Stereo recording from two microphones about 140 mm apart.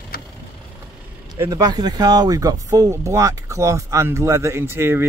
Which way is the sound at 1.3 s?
25° right (ahead or behind).